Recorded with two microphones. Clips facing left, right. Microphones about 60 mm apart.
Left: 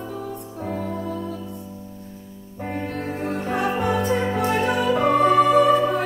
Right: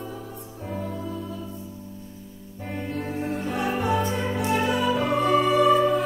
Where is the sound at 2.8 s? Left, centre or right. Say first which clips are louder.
Even; left.